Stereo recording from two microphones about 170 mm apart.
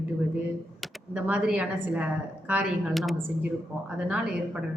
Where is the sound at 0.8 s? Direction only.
5° right (ahead or behind).